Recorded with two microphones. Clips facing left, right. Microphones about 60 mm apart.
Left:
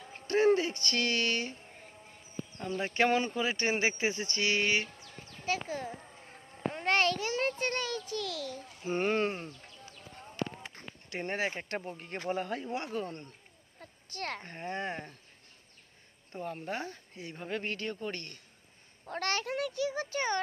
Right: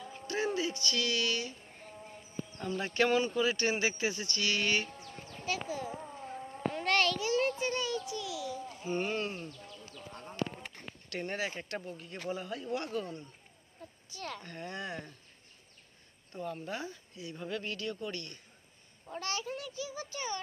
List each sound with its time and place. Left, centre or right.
0.3 s speech: left
2.8 s speech: left
5.4 s speech: left
6.7 s speech: left
7.2 s a child's voice: left
11.1 s speech: left
12.6 s speech: left
13.7 s a sound: left
14.4 s speech: left
16.3 s speech: left
19.0 s a child's voice: left
19.4 s a child's voice: left